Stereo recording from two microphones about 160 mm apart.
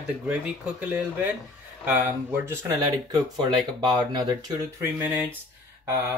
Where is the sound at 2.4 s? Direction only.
20° right (ahead or behind).